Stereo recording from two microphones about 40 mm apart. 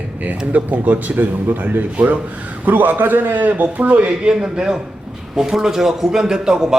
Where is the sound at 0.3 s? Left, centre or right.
Right.